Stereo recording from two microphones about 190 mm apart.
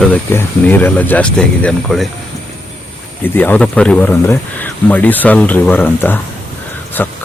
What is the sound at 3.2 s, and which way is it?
Speech, 10° left (ahead or behind).